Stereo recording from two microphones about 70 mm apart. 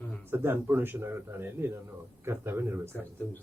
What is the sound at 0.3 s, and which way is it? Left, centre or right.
Speech, right.